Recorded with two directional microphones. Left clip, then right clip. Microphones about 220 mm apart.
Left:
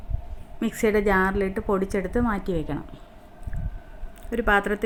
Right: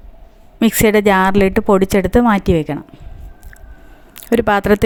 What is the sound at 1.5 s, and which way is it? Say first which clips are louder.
Speech: right 12 dB; 85° right.